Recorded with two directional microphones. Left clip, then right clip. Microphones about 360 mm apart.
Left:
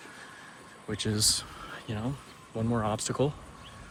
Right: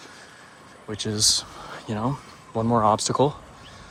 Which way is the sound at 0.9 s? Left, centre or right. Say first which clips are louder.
Right 6 dB; centre.